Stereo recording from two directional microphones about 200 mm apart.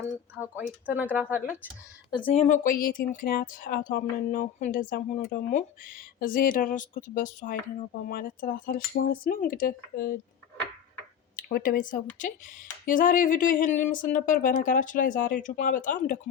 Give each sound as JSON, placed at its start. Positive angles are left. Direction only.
{"t": 0.5, "sound": "speech", "side_deg": -10}
{"t": 2.0, "sound": "speech", "side_deg": 20}
{"t": 2.3, "sound": "speech", "side_deg": 35}
{"t": 11.3, "sound": "speech", "side_deg": 45}